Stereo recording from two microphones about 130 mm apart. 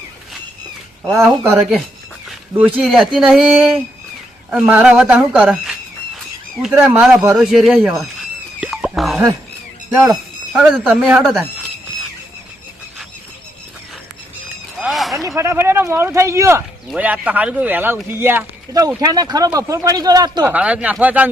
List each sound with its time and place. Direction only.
1.1 s speech: 15° right (ahead or behind)
8.6 s a sound: centre (ahead or behind)
10.0 s squeal: 5° right (ahead or behind)
10.6 s speech: 10° right (ahead or behind)
14.8 s a sound: centre (ahead or behind)
15.4 s speech: 20° right (ahead or behind)
16.9 s speech: 10° right (ahead or behind)
18.9 s speech: 30° right (ahead or behind)
20.4 s speech: 10° right (ahead or behind)